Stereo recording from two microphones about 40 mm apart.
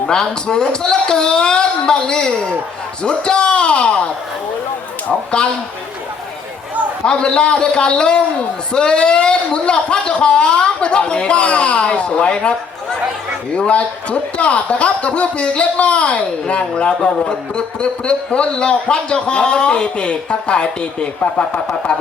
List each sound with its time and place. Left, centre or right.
0.1 s speech: centre
5.4 s speech: left
7.0 s speech: left